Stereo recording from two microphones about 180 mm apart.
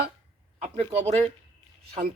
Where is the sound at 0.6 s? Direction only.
35° right (ahead or behind).